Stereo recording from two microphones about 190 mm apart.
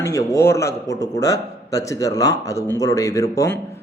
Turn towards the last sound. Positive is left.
turn(degrees=15)  # may be behind; listen again after turning